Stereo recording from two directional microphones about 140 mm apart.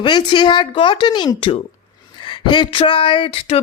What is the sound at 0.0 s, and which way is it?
A woman's voice, 35° left (ahead or behind).